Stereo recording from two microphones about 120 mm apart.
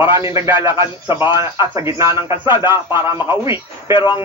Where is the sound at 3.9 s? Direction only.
40° left (ahead or behind).